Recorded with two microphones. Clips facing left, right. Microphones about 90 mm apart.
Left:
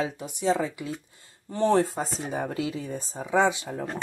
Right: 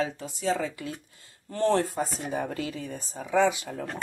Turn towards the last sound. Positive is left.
turn(degrees=25)  # may be behind; listen again after turning